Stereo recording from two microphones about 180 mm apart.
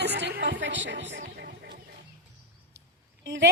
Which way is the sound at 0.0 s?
70° right (ahead or behind).